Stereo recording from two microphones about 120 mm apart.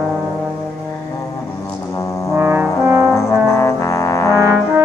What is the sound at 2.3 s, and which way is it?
Brass instrument, 20° right (ahead or behind).